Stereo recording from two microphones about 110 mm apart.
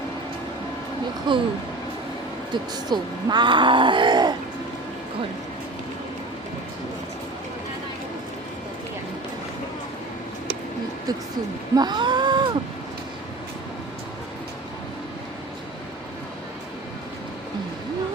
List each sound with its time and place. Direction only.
1.3 s speech: 45° right (ahead or behind)
2.5 s speech: 40° right (ahead or behind)
11.7 s a sound: 40° right (ahead or behind)